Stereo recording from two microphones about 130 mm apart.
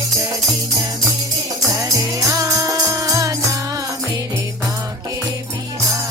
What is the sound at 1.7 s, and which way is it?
Music, 25° right (ahead or behind).